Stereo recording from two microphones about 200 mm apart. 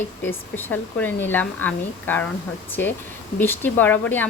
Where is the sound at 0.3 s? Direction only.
10° left (ahead or behind).